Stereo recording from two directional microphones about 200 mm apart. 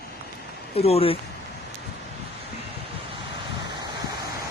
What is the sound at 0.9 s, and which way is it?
Speech, 30° left (ahead or behind).